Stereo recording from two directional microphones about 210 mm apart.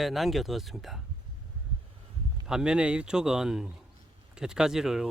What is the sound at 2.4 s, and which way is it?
Speech, 5° right (ahead or behind).